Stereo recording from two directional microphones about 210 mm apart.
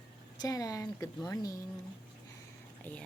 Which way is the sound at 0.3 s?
15° left (ahead or behind).